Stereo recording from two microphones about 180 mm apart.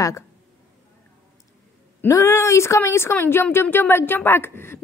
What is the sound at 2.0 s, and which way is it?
A woman's voice, 15° left (ahead or behind).